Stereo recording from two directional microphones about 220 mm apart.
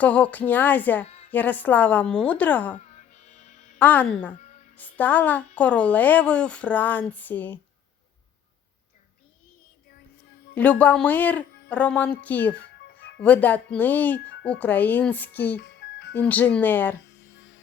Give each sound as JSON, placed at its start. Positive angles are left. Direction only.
{"t": 0.0, "sound": "speech", "side_deg": 5}
{"t": 1.0, "sound": "a sound", "side_deg": 30}
{"t": 1.3, "sound": "speech", "side_deg": 10}
{"t": 2.7, "sound": "music", "side_deg": 30}
{"t": 3.8, "sound": "speech", "side_deg": 5}
{"t": 10.5, "sound": "speech", "side_deg": 5}
{"t": 15.5, "sound": "music", "side_deg": 50}
{"t": 16.1, "sound": "speech", "side_deg": 10}